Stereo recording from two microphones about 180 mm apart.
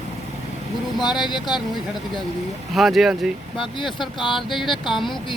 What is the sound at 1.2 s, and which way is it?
Speech, 25° left (ahead or behind).